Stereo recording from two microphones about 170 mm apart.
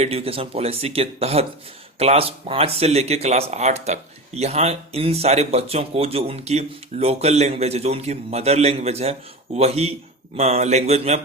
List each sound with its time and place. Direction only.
0.0 s speech: 35° right (ahead or behind)